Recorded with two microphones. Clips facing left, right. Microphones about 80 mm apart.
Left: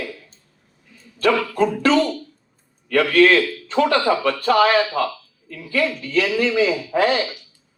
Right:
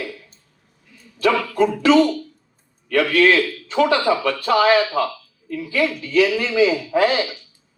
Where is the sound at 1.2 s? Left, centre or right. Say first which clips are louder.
Even; left.